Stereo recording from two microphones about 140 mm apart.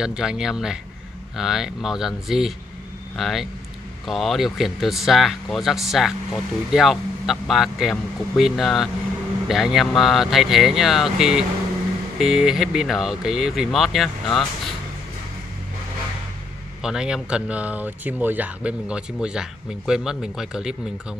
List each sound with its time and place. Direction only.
0.0 s a man's voice: 5° right (ahead or behind)
16.8 s a man's voice: 5° right (ahead or behind)